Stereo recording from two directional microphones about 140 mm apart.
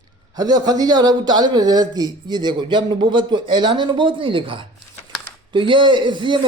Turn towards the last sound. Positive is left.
turn(degrees=-35)  # may be behind; listen again after turning